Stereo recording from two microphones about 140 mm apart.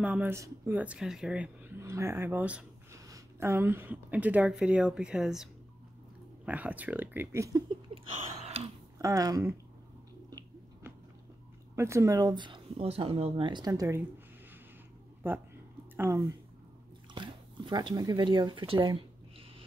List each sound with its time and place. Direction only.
0.0 s speech: 10° right (ahead or behind)
1.8 s a woman's voice: 20° right (ahead or behind)
7.9 s a sound: 45° right (ahead or behind)
8.9 s speech: 20° right (ahead or behind)
11.7 s speech: 20° right (ahead or behind)
15.2 s speech: 15° right (ahead or behind)
17.1 s speech: 35° right (ahead or behind)